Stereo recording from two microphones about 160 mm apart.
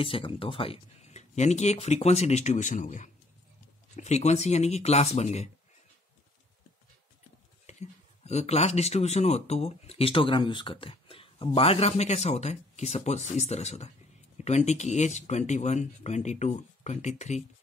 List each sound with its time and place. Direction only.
0.0 s speech: 35° left (ahead or behind)
7.6 s speech: 45° left (ahead or behind)